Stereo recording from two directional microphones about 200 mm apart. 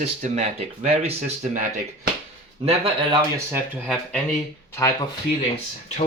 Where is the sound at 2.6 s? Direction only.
30° right (ahead or behind).